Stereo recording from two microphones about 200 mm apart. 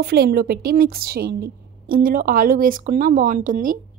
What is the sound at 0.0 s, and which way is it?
A woman's voice, 50° right (ahead or behind).